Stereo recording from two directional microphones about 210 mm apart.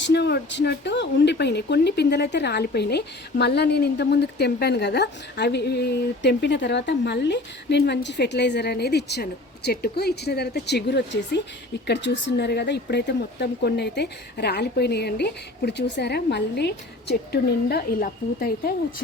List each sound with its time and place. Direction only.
0.0 s speech: 55° left (ahead or behind)